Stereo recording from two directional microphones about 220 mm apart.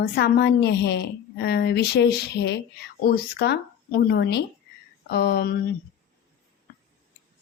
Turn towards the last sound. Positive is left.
turn(degrees=45)  # may be behind; listen again after turning